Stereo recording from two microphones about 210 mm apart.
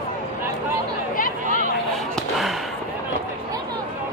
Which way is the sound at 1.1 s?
40° left (ahead or behind).